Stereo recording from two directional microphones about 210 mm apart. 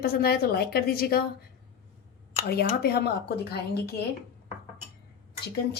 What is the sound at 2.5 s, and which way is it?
A woman's voice, 50° left (ahead or behind).